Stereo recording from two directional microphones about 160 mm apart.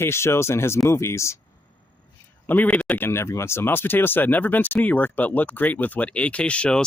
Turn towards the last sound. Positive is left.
turn(degrees=5)  # may be behind; listen again after turning